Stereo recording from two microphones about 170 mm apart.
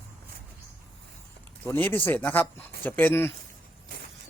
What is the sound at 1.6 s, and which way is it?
Speech, 10° left (ahead or behind).